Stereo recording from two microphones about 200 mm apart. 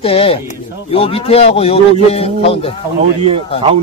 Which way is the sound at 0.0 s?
30° left (ahead or behind).